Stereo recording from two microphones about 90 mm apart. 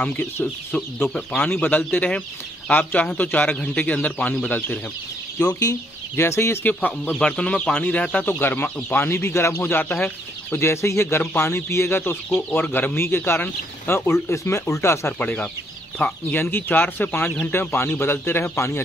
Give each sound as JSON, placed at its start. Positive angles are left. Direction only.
{"t": 0.0, "sound": "speech", "side_deg": 15}
{"t": 5.4, "sound": "speech", "side_deg": 45}
{"t": 6.6, "sound": "speech", "side_deg": 20}
{"t": 8.3, "sound": "speech", "side_deg": 25}
{"t": 15.1, "sound": "speech", "side_deg": 15}